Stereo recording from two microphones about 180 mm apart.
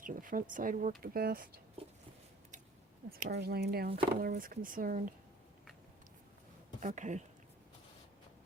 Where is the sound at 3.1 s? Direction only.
55° right (ahead or behind).